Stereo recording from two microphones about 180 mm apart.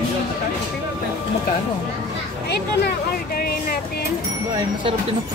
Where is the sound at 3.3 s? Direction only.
60° left (ahead or behind).